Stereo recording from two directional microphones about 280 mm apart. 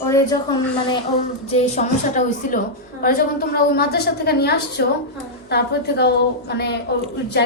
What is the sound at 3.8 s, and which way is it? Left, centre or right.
A woman's voice, left.